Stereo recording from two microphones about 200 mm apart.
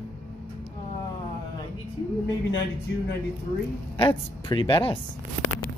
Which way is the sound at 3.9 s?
25° left (ahead or behind).